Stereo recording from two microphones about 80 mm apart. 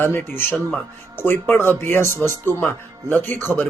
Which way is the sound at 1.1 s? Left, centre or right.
Left.